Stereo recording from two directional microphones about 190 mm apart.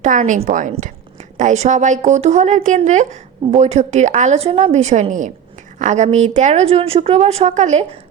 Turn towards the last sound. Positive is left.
turn(degrees=-40)  # may be behind; listen again after turning